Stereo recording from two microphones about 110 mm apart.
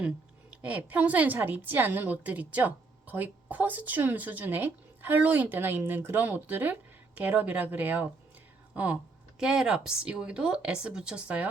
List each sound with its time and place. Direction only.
0.6 s a woman's voice: 15° right (ahead or behind)